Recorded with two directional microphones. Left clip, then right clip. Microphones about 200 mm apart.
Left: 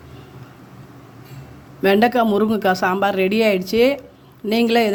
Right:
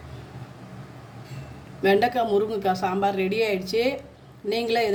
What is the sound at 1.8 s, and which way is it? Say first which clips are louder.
A woman's voice: left 5 dB; 40° left (ahead or behind).